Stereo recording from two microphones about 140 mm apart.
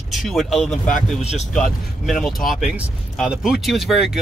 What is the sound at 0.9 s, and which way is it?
Speech, 50° left (ahead or behind).